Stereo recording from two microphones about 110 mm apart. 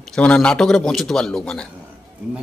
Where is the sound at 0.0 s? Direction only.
10° left (ahead or behind).